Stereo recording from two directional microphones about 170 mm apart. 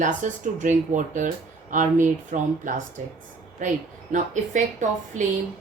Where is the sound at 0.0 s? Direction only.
50° right (ahead or behind).